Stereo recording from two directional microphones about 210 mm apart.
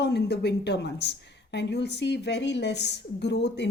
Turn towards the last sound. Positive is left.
turn(degrees=55)  # may be behind; listen again after turning